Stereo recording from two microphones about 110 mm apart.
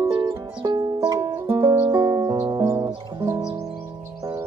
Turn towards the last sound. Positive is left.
turn(degrees=-25)  # may be behind; listen again after turning